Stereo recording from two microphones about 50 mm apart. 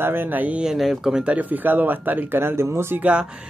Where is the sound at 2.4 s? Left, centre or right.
Right.